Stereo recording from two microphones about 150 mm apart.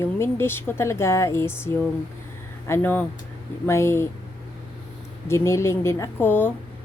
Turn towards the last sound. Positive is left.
turn(degrees=15)  # may be behind; listen again after turning